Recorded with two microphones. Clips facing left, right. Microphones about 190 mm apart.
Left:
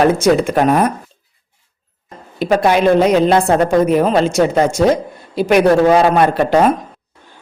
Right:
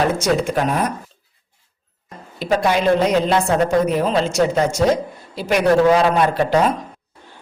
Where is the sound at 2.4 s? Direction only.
60° left (ahead or behind).